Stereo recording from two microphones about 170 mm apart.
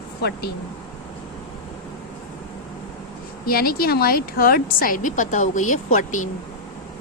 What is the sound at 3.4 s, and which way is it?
A woman's voice, 60° left (ahead or behind).